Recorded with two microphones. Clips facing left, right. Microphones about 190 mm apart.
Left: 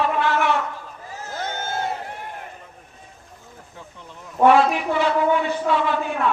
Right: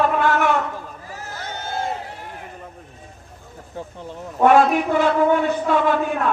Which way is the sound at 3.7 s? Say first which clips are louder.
Right 11 dB; 40° right (ahead or behind).